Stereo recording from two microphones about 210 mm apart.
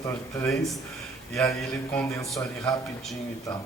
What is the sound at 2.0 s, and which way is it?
Speech, 10° left (ahead or behind).